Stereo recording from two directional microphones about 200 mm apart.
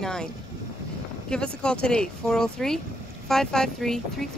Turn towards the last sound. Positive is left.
turn(degrees=0)  # may be behind; listen again after turning